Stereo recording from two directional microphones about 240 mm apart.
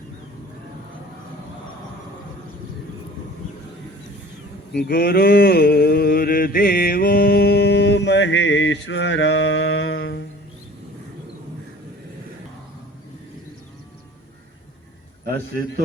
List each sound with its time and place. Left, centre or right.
4.7 s mantra: left